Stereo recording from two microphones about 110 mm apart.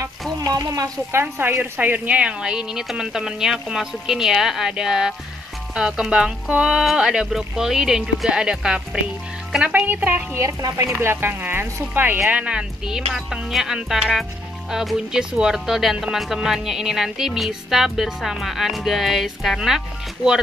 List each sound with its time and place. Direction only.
0.5 s speech: 30° right (ahead or behind)
1.2 s speech: 15° right (ahead or behind)
10.4 s speech: 25° right (ahead or behind); by 19.8 s centre (ahead or behind)